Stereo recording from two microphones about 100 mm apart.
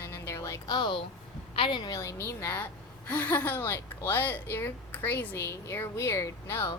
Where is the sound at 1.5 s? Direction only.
55° left (ahead or behind).